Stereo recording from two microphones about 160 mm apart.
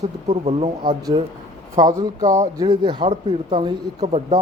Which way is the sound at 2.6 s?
30° right (ahead or behind).